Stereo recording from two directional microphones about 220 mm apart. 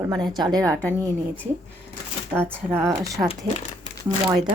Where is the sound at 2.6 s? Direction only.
10° right (ahead or behind).